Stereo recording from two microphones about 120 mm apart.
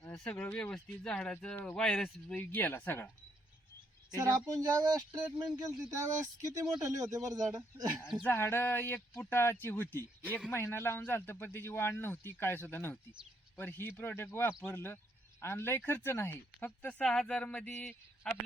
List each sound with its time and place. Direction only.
0.3 s speech: 15° left (ahead or behind)
2.3 s speech: 15° left (ahead or behind)
4.1 s speech: 30° right (ahead or behind)
8.0 s speech: 5° right (ahead or behind)
8.3 s a man's voice: 20° left (ahead or behind)